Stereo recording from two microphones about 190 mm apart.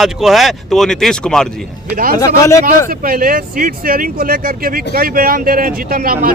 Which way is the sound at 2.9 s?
50° right (ahead or behind).